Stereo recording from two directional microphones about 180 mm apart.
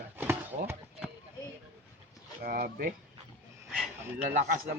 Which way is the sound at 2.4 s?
55° right (ahead or behind).